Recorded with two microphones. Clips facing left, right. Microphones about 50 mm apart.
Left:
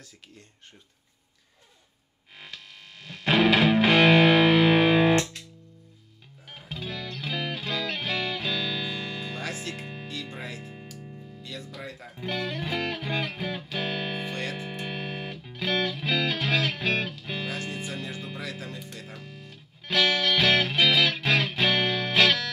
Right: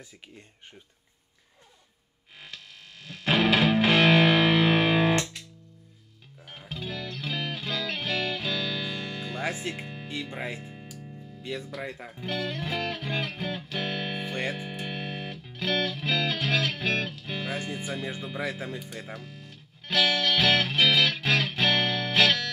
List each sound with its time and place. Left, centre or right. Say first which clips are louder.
3.1 s music: left 2 dB; centre
6.7 s music: even; centre
9.4 s music: right 3 dB; right
10.3 s speech: right 3 dB; right
10.6 s music: left 1 dB; centre
11.4 s speech: right 5 dB; right
12.2 s music: left 1 dB; centre
14.3 s music: right 2 dB; centre
14.7 s music: left 1 dB; centre
17.6 s speech: right 1 dB; centre
19.1 s music: right 1 dB; centre